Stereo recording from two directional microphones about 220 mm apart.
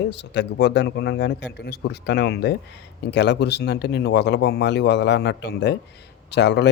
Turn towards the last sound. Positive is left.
turn(degrees=50)  # may be behind; listen again after turning